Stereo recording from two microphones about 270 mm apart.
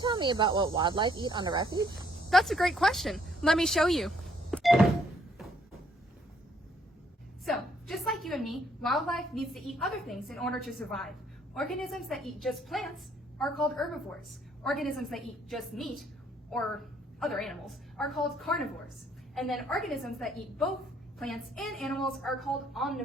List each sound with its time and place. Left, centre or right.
0.0 s speech: centre
2.3 s a woman's voice: centre
7.4 s a woman's voice: centre